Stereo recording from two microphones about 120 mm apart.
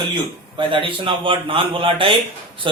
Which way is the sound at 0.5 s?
45° right (ahead or behind).